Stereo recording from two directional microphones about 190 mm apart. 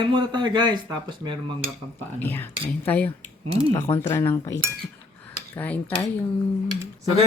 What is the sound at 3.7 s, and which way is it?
Speech, 15° left (ahead or behind).